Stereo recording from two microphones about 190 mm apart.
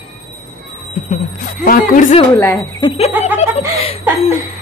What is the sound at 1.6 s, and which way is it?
Speech, 45° left (ahead or behind).